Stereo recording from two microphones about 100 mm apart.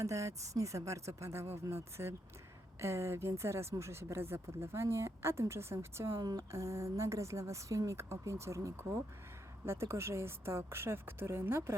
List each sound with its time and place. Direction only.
0.0 s speech: 30° right (ahead or behind)
6.1 s speech: 40° right (ahead or behind)